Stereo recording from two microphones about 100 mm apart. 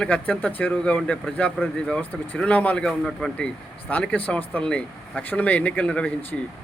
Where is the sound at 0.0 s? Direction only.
10° left (ahead or behind).